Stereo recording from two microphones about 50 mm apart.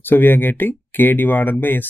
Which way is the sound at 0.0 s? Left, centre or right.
Left.